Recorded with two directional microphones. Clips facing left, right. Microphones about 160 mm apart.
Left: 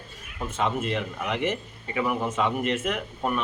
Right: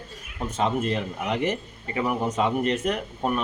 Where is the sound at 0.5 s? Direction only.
40° right (ahead or behind).